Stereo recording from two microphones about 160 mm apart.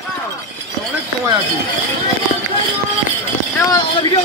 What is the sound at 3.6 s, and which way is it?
Speech, 20° left (ahead or behind).